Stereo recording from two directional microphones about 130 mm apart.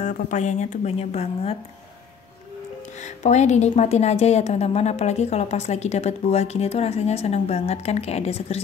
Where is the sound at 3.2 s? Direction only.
60° left (ahead or behind).